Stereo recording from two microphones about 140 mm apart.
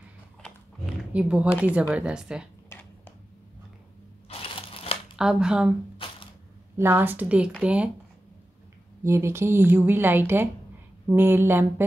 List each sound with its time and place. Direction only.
1.1 s speech: 10° right (ahead or behind)
2.7 s a sound: 20° left (ahead or behind)
4.3 s a sound: 40° left (ahead or behind)
5.1 s speech: 5° right (ahead or behind)
6.8 s speech: 15° right (ahead or behind)
9.0 s speech: 20° right (ahead or behind)